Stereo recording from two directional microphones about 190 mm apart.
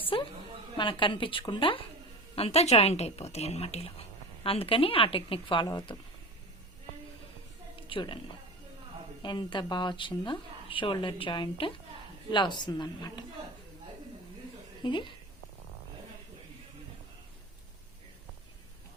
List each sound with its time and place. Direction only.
0.1 s a woman's voice: 25° left (ahead or behind)
7.8 s a sound: 25° left (ahead or behind)
9.2 s speech: 25° left (ahead or behind)
14.8 s speech: 25° left (ahead or behind)